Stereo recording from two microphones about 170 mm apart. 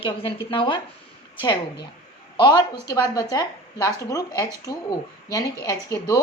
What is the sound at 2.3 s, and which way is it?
A woman's voice, 25° left (ahead or behind).